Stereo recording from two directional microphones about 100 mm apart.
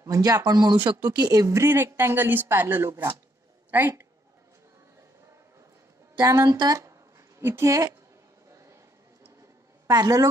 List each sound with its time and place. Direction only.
0.0 s speech: 35° right (ahead or behind)
6.1 s speech: 35° right (ahead or behind)
6.8 s a sound: 30° right (ahead or behind)
9.8 s speech: 40° right (ahead or behind)